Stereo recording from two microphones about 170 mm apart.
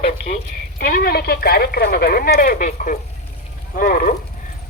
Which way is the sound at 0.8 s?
55° left (ahead or behind).